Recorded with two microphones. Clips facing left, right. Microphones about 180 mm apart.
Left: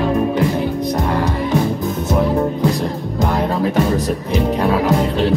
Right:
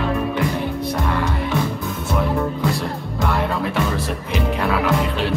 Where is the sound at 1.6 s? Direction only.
35° left (ahead or behind).